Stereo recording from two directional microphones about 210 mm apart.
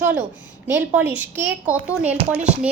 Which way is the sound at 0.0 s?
10° right (ahead or behind).